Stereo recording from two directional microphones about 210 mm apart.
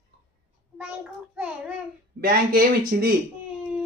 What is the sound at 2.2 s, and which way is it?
Speech, 45° right (ahead or behind).